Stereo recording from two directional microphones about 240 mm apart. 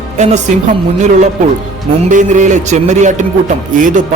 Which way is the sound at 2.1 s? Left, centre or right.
Right.